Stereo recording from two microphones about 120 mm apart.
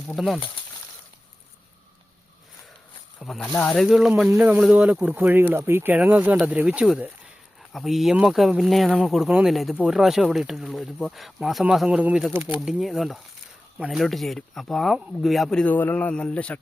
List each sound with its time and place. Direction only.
0.1 s speech: centre (ahead or behind)
3.2 s speech: centre (ahead or behind); by 12.5 s 15° right (ahead or behind)
12.5 s speech: centre (ahead or behind)